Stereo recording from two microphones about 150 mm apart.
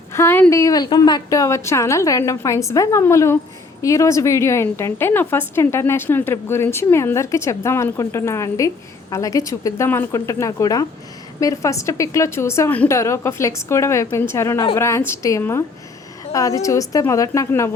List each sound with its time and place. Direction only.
0.1 s a woman's voice: 15° left (ahead or behind)